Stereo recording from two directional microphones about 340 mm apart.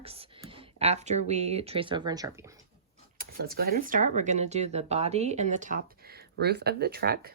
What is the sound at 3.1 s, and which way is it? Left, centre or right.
Speech, right.